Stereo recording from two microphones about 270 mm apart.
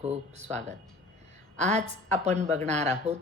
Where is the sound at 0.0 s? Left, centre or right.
Right.